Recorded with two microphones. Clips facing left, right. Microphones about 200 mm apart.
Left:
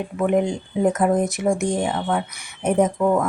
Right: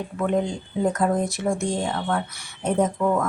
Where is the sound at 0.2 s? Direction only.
15° left (ahead or behind).